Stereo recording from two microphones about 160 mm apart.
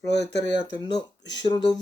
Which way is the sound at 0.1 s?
90° left.